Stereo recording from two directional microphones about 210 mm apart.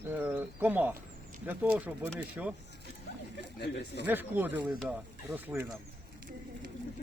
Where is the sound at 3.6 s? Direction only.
55° left (ahead or behind).